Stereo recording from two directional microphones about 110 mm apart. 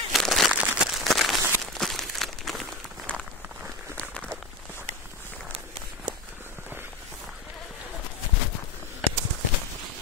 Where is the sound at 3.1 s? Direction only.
10° left (ahead or behind).